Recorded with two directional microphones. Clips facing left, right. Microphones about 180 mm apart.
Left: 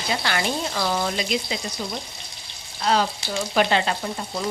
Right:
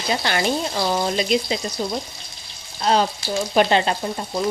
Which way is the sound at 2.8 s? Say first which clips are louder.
Right 3 dB; 25° right (ahead or behind).